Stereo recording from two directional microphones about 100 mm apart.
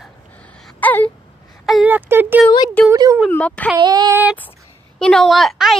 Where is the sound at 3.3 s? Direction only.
15° left (ahead or behind).